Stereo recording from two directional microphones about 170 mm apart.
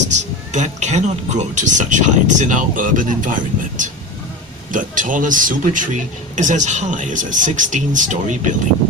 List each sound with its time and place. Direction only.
0.2 s speech: 45° right (ahead or behind)